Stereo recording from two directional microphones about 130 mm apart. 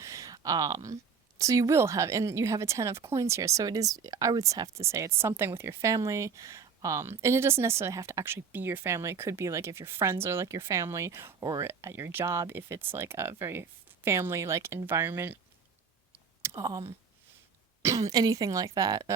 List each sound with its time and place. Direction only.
0.0 s a sound: 25° right (ahead or behind)
1.4 s speech: 25° right (ahead or behind)
16.4 s speech: 25° right (ahead or behind)
17.8 s speech: 25° right (ahead or behind)